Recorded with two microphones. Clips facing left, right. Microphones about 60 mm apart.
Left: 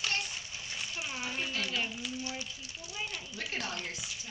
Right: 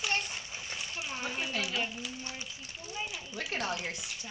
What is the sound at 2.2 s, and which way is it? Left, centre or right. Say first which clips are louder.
Speech: left 2 dB; right.